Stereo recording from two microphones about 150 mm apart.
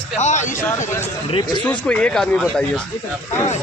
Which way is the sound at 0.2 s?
50° left (ahead or behind).